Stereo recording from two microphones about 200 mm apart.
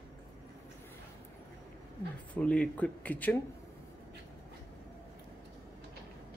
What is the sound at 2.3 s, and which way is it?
Speech, 5° left (ahead or behind).